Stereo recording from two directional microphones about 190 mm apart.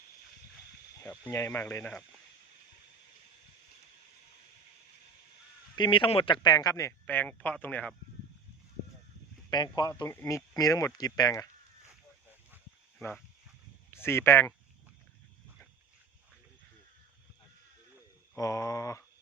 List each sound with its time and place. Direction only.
1.2 s speech: 15° left (ahead or behind)
5.7 s speech: 25° left (ahead or behind); by 7.9 s 10° left (ahead or behind)
9.5 s speech: 20° left (ahead or behind)
13.0 s speech: 5° left (ahead or behind)
18.3 s speech: 15° left (ahead or behind)